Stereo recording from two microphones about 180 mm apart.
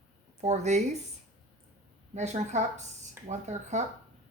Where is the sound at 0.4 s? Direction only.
40° right (ahead or behind).